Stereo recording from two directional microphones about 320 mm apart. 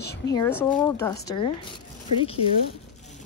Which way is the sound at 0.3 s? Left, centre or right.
Centre.